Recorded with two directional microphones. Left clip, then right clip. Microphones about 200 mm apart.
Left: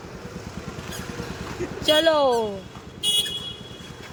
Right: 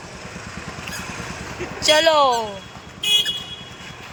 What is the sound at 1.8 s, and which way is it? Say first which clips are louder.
Speech: right 4 dB; 30° left (ahead or behind).